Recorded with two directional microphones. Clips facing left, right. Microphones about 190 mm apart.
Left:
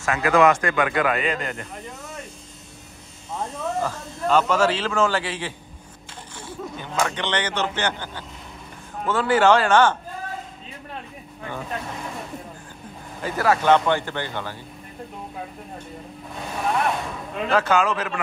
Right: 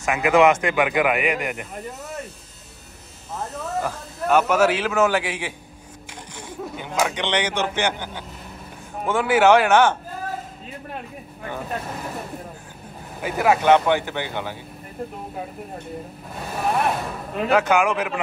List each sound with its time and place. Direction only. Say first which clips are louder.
0.0 s speech: right 1 dB; 20° right (ahead or behind)
3.3 s speech: left 1 dB; 5° right (ahead or behind)
11.4 s speech: right 1 dB; 5° right (ahead or behind)
13.2 s speech: right 2 dB; 15° right (ahead or behind)
16.3 s speech: right 1 dB; 5° right (ahead or behind)